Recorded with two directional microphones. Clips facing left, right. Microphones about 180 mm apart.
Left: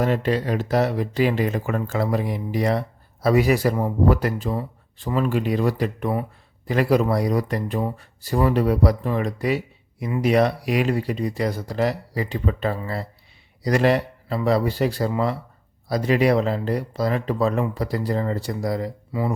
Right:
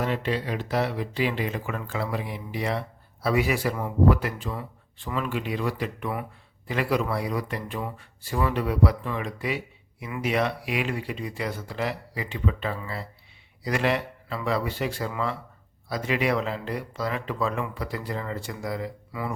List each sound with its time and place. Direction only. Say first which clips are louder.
0.0 s speech: left 6 dB; 45° left (ahead or behind)